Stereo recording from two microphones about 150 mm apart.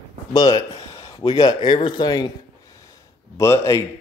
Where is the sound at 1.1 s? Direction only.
25° left (ahead or behind).